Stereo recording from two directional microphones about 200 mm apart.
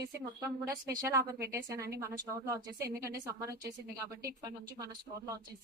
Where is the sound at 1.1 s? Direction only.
15° right (ahead or behind).